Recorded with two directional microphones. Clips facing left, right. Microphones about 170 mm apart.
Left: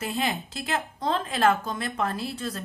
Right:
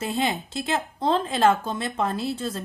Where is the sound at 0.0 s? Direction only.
25° right (ahead or behind).